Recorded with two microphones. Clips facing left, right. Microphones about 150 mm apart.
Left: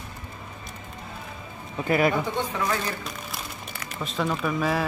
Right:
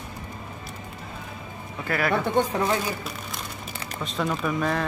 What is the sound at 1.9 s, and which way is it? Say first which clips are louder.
Speech: left 3 dB; 20° left (ahead or behind).